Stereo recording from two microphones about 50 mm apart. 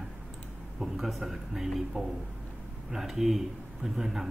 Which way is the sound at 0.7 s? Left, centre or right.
Centre.